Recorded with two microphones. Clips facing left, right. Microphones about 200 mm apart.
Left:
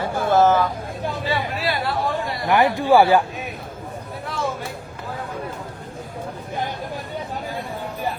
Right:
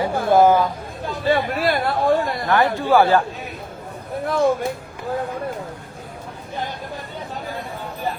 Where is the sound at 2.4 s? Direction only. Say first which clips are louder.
Left 2 dB; 15° left (ahead or behind).